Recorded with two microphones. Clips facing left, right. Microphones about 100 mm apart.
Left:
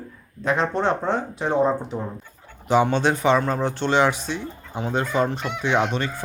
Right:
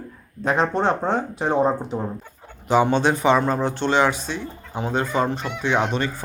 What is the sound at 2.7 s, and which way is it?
Speech, 5° right (ahead or behind).